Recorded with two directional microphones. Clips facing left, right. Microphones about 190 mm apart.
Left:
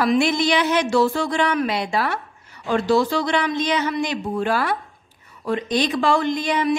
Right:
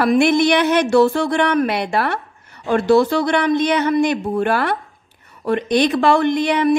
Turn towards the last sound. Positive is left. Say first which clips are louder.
# right 5 dB
turn(degrees=-60)  # may be behind; listen again after turning